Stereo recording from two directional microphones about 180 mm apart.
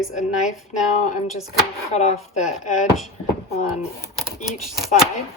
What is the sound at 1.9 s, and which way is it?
Speech, 40° left (ahead or behind).